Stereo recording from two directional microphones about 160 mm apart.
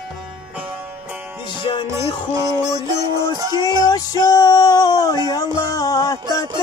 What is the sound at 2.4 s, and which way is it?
Music, 20° right (ahead or behind).